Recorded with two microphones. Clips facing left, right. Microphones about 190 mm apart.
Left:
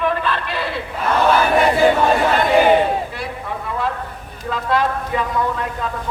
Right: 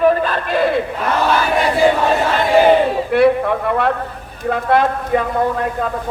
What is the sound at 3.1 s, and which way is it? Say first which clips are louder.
A man's voice: right 15 dB; 65° right (ahead or behind).